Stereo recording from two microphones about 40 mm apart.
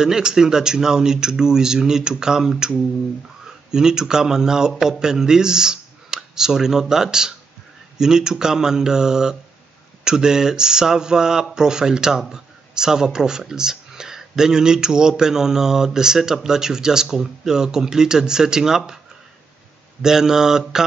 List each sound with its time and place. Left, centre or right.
0.0 s a man's voice: centre
20.0 s speech: centre